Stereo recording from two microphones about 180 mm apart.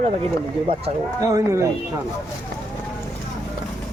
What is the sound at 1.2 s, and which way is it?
Speech, 15° right (ahead or behind).